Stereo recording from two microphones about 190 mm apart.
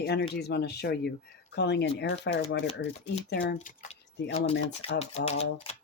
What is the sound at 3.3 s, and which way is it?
Speech, 60° left (ahead or behind).